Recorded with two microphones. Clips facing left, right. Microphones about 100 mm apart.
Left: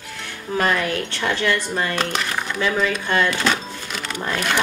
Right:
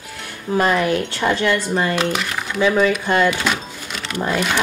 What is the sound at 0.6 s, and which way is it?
Speech, 15° right (ahead or behind).